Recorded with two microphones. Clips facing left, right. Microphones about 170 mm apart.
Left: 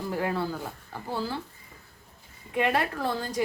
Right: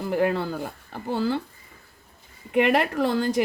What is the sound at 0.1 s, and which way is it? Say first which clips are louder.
A woman's voice: right 6 dB; 65° right (ahead or behind).